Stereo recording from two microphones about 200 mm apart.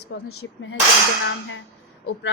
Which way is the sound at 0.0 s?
80° left.